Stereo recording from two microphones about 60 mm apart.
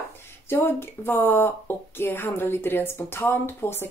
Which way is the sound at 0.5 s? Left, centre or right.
Left.